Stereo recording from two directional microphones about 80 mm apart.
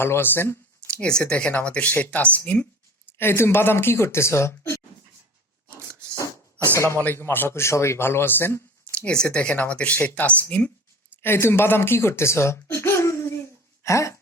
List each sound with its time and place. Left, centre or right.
0.0 s speech: left
1.0 s speech: centre
3.1 s speech: left
7.0 s speech: left
8.8 s speech: centre
10.0 s speech: left
10.2 s speech: centre
11.2 s speech: left